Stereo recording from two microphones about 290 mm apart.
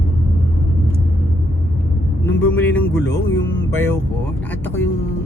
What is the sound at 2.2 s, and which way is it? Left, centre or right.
Vehicle, centre.